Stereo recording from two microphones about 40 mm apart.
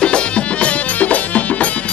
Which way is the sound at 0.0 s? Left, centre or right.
Left.